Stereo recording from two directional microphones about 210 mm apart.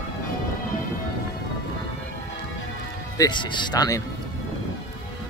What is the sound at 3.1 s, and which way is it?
Speech, 20° left (ahead or behind).